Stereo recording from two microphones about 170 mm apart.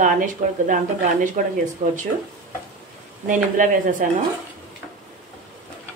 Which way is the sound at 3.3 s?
50° right (ahead or behind).